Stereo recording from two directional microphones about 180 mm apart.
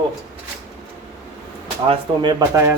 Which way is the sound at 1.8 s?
30° right (ahead or behind).